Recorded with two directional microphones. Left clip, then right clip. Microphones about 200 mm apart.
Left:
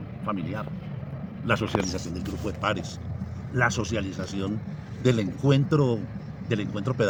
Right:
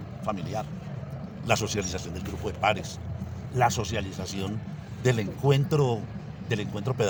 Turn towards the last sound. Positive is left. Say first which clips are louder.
# left 1 dB
turn(degrees=-55)  # may be behind; listen again after turning